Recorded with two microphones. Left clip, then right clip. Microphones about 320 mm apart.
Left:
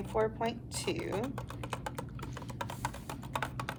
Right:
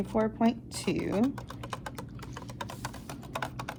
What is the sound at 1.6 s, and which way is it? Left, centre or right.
Typing, centre.